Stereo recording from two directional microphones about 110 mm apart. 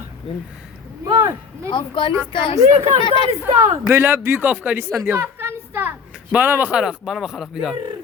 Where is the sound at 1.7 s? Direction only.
45° left (ahead or behind).